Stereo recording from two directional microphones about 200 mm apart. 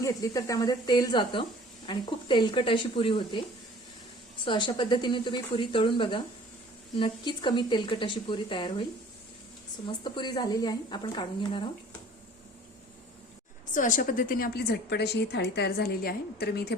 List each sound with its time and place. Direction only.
0.0 s speech: 15° left (ahead or behind)
4.4 s speech: 25° left (ahead or behind)
9.8 s speech: 25° left (ahead or behind)
13.7 s a woman's voice: 40° left (ahead or behind)